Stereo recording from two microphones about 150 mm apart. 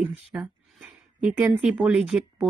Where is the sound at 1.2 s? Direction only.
5° right (ahead or behind).